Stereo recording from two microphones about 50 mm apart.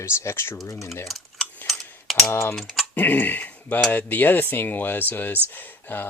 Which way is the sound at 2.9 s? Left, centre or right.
Left.